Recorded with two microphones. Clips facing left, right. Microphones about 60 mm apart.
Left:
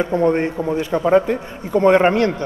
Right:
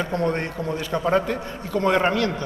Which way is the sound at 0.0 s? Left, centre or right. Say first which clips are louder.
Left 7 dB; centre.